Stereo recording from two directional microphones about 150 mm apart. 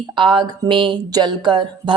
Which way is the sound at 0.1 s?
35° right (ahead or behind).